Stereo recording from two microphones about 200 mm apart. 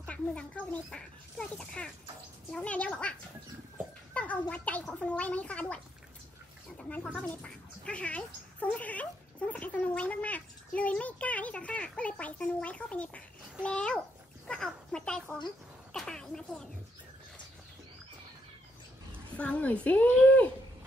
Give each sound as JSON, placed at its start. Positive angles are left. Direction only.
{"t": 0.0, "sound": "speech", "side_deg": 5}
{"t": 6.8, "sound": "speech", "side_deg": 5}
{"t": 19.3, "sound": "speech", "side_deg": 5}